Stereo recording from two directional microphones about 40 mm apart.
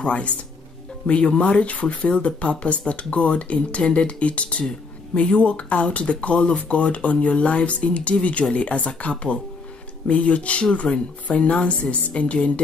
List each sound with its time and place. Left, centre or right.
0.0 s speech: left